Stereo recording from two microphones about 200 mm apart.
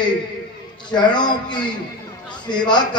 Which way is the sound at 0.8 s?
20° left (ahead or behind).